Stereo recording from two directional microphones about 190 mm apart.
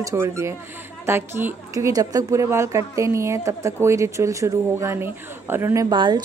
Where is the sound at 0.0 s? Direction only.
15° right (ahead or behind).